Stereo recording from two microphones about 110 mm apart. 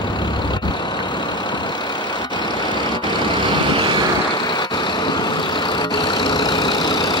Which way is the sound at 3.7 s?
50° right (ahead or behind).